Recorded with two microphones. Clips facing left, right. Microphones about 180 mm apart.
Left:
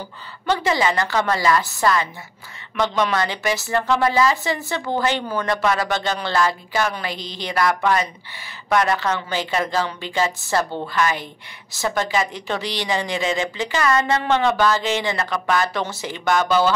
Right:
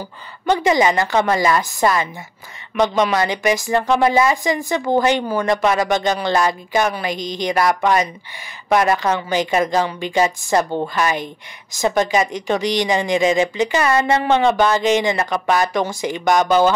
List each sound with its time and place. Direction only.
0.5 s a woman's voice: 15° right (ahead or behind)